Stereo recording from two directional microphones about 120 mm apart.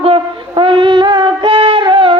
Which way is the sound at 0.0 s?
50° right (ahead or behind).